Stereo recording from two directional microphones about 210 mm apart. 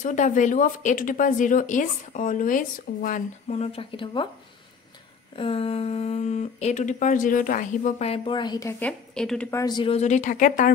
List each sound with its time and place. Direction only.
0.0 s speech: 35° left (ahead or behind)
5.3 s speech: 25° left (ahead or behind)
8.1 s a woman's voice: 25° left (ahead or behind); by 9.5 s 5° left (ahead or behind)
9.5 s speech: 15° left (ahead or behind); by 10.7 s 40° left (ahead or behind)